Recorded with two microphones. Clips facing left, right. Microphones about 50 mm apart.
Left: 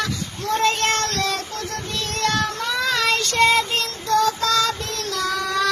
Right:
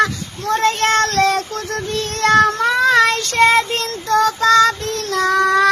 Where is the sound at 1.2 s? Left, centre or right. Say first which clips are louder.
Right 8 dB; right.